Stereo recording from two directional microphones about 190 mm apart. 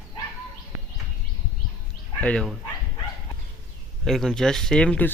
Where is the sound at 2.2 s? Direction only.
5° left (ahead or behind).